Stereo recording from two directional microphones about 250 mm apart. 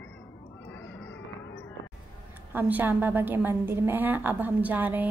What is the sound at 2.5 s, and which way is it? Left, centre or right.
A woman's voice, centre.